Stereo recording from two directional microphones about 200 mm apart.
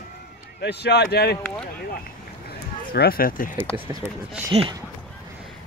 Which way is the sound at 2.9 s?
50° left (ahead or behind).